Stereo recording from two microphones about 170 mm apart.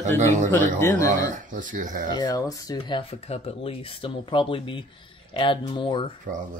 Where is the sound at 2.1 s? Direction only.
25° left (ahead or behind).